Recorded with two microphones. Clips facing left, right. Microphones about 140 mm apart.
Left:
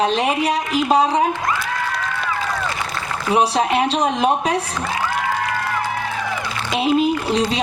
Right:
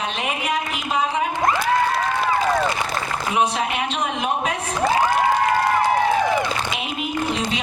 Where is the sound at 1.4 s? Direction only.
35° right (ahead or behind).